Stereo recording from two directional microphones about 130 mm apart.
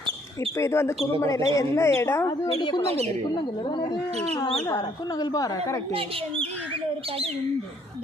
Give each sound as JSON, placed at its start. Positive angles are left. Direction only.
{"t": 0.5, "sound": "a woman's voice", "side_deg": 20}
{"t": 2.5, "sound": "speech", "side_deg": 35}
{"t": 5.2, "sound": "a woman's voice", "side_deg": 30}
{"t": 5.9, "sound": "speech", "side_deg": -45}